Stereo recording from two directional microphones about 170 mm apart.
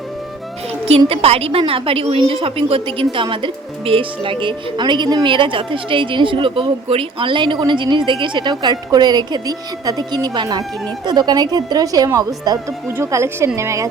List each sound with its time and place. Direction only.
0.9 s a woman's voice: 35° right (ahead or behind); by 13.8 s 15° right (ahead or behind)